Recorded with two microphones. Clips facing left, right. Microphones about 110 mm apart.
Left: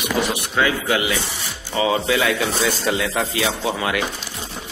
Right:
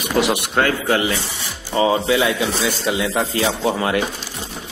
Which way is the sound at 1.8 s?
25° right (ahead or behind).